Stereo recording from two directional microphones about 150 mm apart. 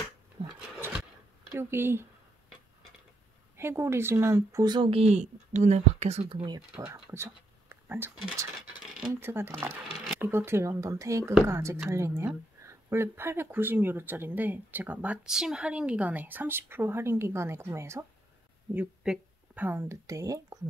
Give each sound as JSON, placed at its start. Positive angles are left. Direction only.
{"t": 0.7, "sound": "a sound", "side_deg": -15}
{"t": 1.5, "sound": "speech", "side_deg": -15}
{"t": 3.5, "sound": "speech", "side_deg": -15}
{"t": 6.7, "sound": "speech", "side_deg": -15}
{"t": 7.7, "sound": "a sound", "side_deg": -15}
{"t": 9.1, "sound": "speech", "side_deg": -15}